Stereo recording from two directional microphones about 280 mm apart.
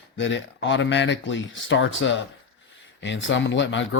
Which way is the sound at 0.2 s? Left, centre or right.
Left.